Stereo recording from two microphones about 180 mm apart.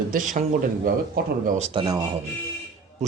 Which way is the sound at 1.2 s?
55° right (ahead or behind).